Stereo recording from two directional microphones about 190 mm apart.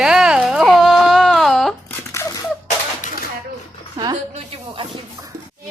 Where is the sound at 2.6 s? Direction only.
40° left (ahead or behind).